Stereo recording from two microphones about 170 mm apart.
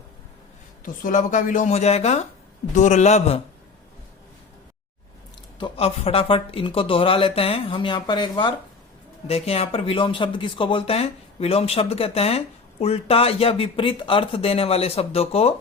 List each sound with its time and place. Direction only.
1.0 s speech: 50° left (ahead or behind)
5.5 s speech: 30° left (ahead or behind)